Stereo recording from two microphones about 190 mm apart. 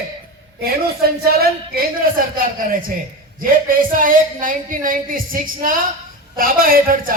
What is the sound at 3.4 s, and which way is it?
A man's voice, 45° right (ahead or behind).